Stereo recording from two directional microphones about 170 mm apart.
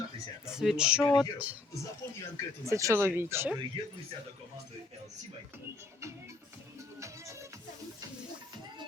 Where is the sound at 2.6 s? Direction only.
15° right (ahead or behind).